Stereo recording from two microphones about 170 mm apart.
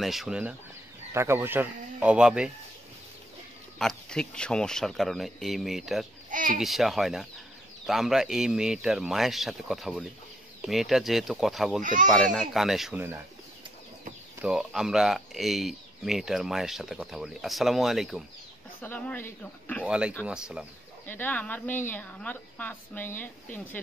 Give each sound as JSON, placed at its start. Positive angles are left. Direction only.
{"t": 0.0, "sound": "speech", "side_deg": 0}
{"t": 3.7, "sound": "speech", "side_deg": 5}
{"t": 6.3, "sound": "a child's voice", "side_deg": -50}
{"t": 6.6, "sound": "speech", "side_deg": 0}
{"t": 11.8, "sound": "speech", "side_deg": -50}
{"t": 12.1, "sound": "speech", "side_deg": 0}
{"t": 14.4, "sound": "speech", "side_deg": -5}
{"t": 18.8, "sound": "speech", "side_deg": 10}
{"t": 19.9, "sound": "speech", "side_deg": -5}
{"t": 21.1, "sound": "speech", "side_deg": 10}